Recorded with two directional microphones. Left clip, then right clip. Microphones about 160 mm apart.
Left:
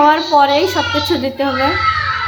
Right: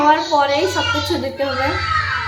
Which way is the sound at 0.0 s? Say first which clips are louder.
Left 4 dB; 40° left (ahead or behind).